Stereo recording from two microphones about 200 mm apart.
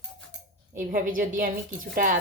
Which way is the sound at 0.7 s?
40° right (ahead or behind).